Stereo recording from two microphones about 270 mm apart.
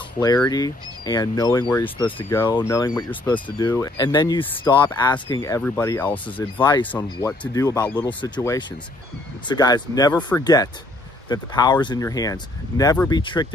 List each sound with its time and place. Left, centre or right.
0.2 s speech: centre